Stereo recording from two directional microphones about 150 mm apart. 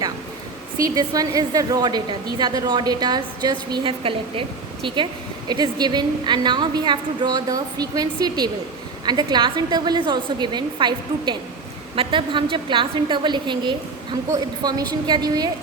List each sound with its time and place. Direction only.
0.8 s a woman's voice: 25° right (ahead or behind)